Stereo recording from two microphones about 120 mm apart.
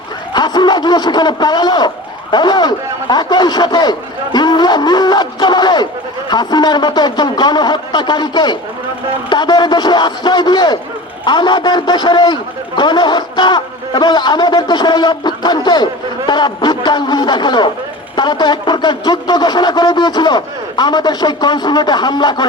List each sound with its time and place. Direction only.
0.3 s a man's voice: 35° left (ahead or behind)